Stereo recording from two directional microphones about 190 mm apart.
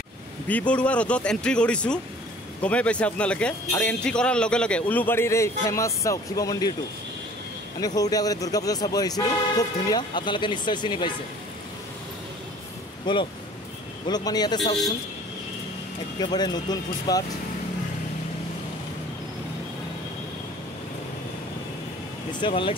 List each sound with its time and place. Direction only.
0.5 s a man's voice: 5° left (ahead or behind)
7.8 s speech: 20° left (ahead or behind)
13.0 s speech: 25° left (ahead or behind)
16.2 s speech: 20° left (ahead or behind)
22.4 s speech: 25° left (ahead or behind)